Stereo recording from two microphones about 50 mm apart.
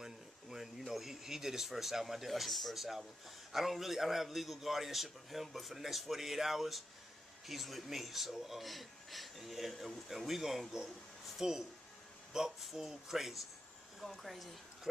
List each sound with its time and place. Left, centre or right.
0.0 s speech: centre